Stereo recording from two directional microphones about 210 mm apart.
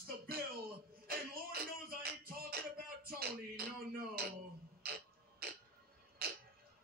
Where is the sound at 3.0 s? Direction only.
45° right (ahead or behind).